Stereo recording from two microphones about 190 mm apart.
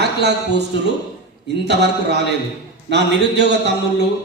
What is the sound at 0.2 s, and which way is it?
Speech, 60° right (ahead or behind).